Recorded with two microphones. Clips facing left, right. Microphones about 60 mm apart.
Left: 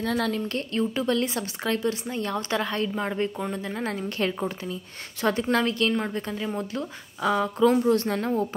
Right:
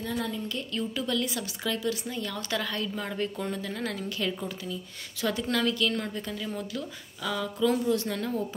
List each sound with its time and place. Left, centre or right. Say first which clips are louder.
0.0 s speech: left 6 dB; left
0.7 s a woman's voice: left 6 dB; left
3.1 s a woman's voice: left 4 dB; left